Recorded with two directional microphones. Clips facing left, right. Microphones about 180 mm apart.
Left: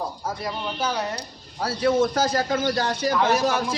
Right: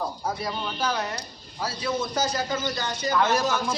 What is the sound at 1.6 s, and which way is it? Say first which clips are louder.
A man's voice: left 8 dB; 60° left (ahead or behind).